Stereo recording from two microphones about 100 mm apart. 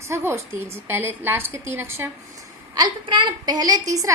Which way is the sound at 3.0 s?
50° right (ahead or behind).